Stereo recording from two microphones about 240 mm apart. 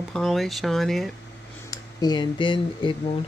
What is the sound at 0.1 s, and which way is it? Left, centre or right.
Speech, centre.